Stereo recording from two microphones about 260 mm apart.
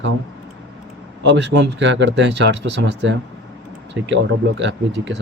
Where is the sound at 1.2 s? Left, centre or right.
Right.